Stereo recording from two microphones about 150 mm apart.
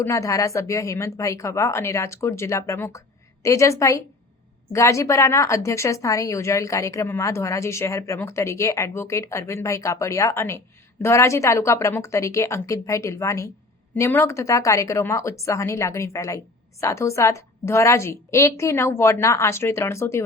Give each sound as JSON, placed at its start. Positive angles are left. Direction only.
{"t": 0.0, "sound": "speech", "side_deg": 20}